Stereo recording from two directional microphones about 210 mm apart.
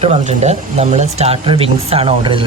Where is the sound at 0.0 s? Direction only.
30° right (ahead or behind).